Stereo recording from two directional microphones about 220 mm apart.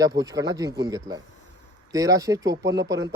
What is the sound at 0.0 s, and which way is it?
A man's voice, 15° right (ahead or behind).